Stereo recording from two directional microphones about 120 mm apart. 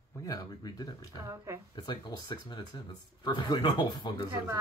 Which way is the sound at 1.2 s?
25° right (ahead or behind).